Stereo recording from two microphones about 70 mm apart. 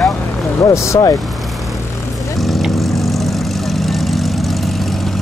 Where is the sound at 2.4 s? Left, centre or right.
Centre.